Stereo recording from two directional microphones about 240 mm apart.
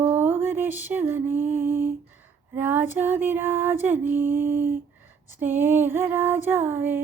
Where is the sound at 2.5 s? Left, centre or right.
Centre.